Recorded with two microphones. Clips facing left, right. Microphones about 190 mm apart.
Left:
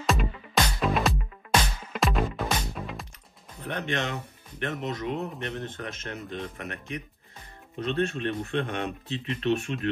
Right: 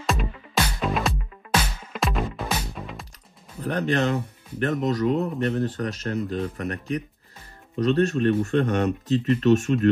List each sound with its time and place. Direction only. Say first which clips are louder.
0.0 s music: even; centre (ahead or behind)
3.6 s speech: right 7 dB; 35° right (ahead or behind)